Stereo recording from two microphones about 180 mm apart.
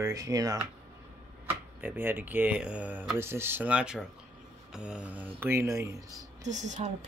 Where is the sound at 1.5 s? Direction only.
10° right (ahead or behind).